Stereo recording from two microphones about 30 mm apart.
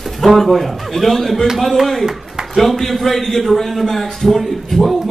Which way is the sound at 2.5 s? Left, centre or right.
Centre.